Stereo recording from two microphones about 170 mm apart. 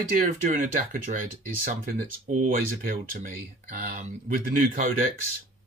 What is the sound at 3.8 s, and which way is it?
Speech, 45° right (ahead or behind).